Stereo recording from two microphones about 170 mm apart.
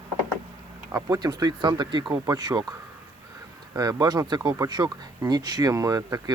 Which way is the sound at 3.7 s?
20° right (ahead or behind).